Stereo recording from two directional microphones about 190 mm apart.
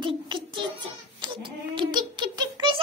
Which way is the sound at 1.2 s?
25° right (ahead or behind).